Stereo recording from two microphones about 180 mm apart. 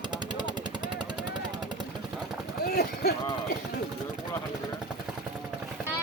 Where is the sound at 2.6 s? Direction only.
60° left (ahead or behind).